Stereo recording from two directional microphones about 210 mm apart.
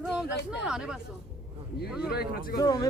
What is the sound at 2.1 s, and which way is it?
Speech, 45° left (ahead or behind).